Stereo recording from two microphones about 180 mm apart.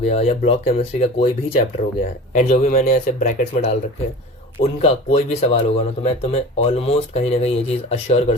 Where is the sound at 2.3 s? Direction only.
40° left (ahead or behind).